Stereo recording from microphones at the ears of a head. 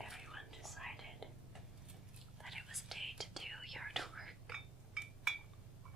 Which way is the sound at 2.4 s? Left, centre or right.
Centre.